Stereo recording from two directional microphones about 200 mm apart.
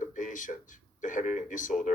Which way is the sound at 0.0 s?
40° left (ahead or behind).